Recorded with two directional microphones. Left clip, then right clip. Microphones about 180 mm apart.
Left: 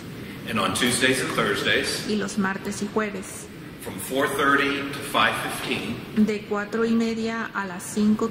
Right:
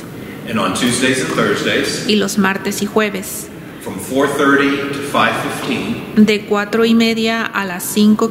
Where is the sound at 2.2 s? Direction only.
35° right (ahead or behind).